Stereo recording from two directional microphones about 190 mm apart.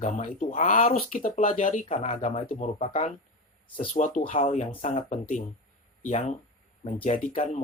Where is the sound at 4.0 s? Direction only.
45° left (ahead or behind).